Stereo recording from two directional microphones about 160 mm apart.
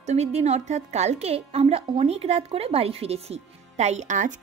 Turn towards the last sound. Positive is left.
turn(degrees=-50)  # may be behind; listen again after turning